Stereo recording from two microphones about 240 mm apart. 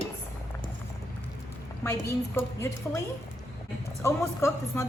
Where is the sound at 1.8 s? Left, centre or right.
Centre.